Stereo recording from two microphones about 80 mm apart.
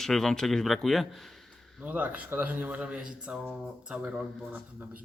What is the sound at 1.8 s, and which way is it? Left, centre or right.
Speech, centre.